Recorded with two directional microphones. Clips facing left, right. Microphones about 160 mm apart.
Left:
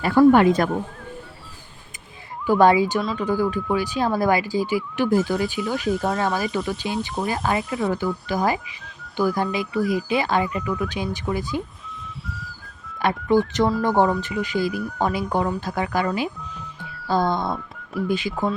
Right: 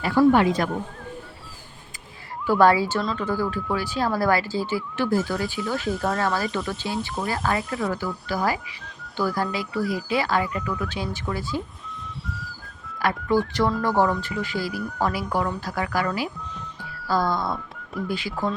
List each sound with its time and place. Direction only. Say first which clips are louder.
0.0 s speech: left 3 dB; 50° left (ahead or behind)
2.5 s speech: left 2 dB; 20° left (ahead or behind)
3.0 s speech: left 1 dB; 5° left (ahead or behind)
3.2 s speech: left 3 dB; 15° left (ahead or behind)
5.9 s speech: left 3 dB; centre (ahead or behind)
6.1 s speech: left 2 dB; 15° left (ahead or behind)
7.6 s speech: left 2 dB; centre (ahead or behind)
7.9 s speech: left 4 dB; 20° left (ahead or behind)
13.0 s speech: left 3 dB; 20° left (ahead or behind)